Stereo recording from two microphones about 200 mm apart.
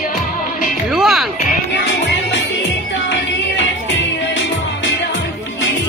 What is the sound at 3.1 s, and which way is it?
Music, 65° left (ahead or behind).